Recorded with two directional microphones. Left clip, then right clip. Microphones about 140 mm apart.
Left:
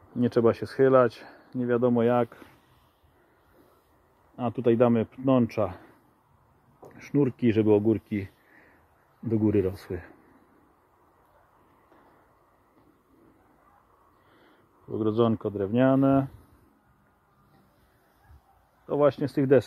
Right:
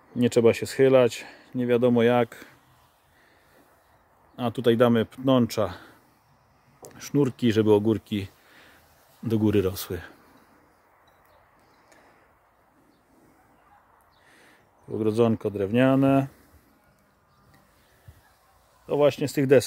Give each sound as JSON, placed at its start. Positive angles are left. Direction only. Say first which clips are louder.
{"t": 0.2, "sound": "speech", "louder": "right 3 dB", "side_deg": -20}
{"t": 4.4, "sound": "speech", "louder": "right 2 dB", "side_deg": -15}
{"t": 9.8, "sound": "speech", "louder": "right 3 dB", "side_deg": -25}
{"t": 14.9, "sound": "speech", "louder": "right 2 dB", "side_deg": -15}
{"t": 18.9, "sound": "speech", "louder": "right 2 dB", "side_deg": -10}